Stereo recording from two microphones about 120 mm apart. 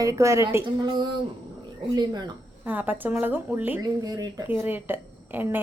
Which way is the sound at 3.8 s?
30° right (ahead or behind).